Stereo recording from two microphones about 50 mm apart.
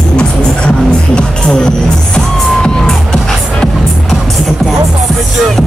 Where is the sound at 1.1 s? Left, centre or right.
Centre.